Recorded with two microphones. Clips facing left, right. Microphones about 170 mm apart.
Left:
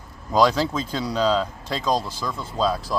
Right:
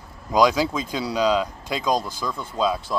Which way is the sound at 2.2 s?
5° left (ahead or behind).